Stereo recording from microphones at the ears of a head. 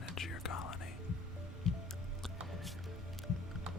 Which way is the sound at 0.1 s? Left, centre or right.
Left.